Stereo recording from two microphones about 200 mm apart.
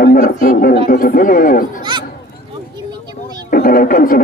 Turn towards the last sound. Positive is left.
turn(degrees=45)  # may be behind; listen again after turning